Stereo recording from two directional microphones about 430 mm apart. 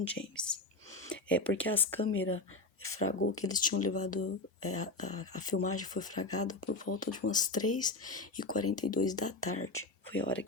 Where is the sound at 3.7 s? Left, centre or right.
Left.